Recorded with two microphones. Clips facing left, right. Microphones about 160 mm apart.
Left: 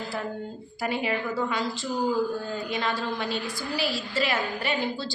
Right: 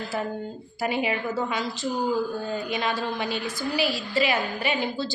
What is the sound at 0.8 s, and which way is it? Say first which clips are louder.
A woman's voice: right 2 dB; 10° right (ahead or behind).